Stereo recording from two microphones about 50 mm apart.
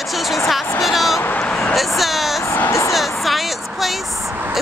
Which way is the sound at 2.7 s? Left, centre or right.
Left.